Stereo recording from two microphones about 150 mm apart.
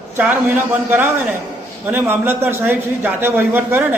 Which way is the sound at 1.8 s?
15° right (ahead or behind).